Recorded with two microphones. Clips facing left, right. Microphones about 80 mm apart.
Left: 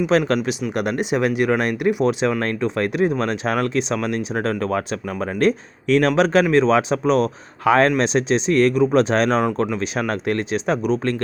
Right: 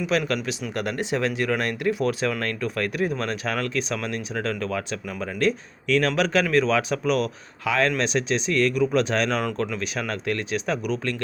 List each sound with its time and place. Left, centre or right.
0.1 s speech: left
0.7 s speech: centre